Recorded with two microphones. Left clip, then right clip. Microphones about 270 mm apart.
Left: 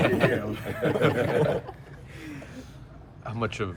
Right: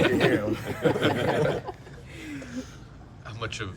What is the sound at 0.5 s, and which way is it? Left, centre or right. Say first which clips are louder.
Speech: even; centre.